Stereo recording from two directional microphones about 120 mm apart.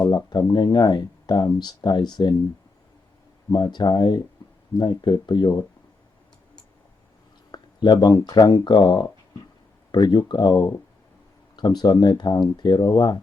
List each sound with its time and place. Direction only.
0.0 s speech: 35° left (ahead or behind)
3.5 s speech: 35° left (ahead or behind)
4.4 s a sound: 35° left (ahead or behind)
4.8 s speech: 40° left (ahead or behind)
7.5 s speech: 40° left (ahead or behind)